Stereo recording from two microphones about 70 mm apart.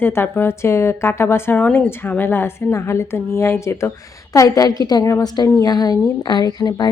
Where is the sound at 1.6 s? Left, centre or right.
Left.